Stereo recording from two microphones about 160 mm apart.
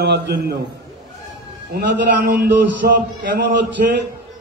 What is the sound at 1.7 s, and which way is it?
Speech, 80° right.